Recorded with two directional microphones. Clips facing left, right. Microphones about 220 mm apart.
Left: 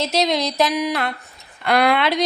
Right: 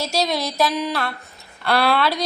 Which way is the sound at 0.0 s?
20° left (ahead or behind).